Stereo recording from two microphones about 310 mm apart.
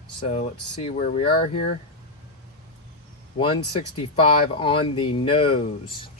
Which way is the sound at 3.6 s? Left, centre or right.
Left.